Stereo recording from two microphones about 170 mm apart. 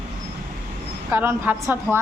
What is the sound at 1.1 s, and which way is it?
Speech, 10° right (ahead or behind).